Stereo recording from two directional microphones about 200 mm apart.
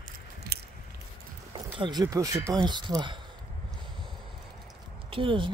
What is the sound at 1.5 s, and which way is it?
Speech, 20° right (ahead or behind).